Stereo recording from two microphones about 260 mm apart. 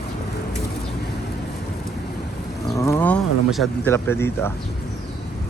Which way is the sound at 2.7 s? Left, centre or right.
Centre.